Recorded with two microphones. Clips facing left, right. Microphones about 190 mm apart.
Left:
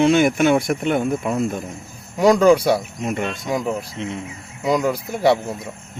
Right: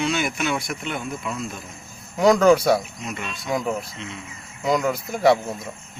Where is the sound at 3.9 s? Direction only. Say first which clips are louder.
Left 8 dB; 55° left (ahead or behind).